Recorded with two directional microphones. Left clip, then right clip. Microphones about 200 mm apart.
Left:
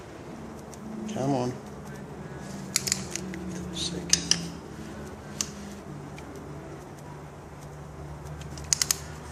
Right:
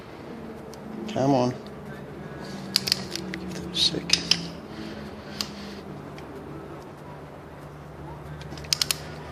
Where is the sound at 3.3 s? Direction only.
40° right (ahead or behind).